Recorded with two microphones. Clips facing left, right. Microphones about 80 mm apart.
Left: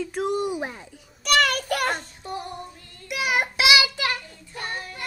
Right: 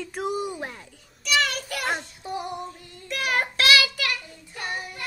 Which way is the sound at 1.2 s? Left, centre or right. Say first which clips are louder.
Left 4 dB; left.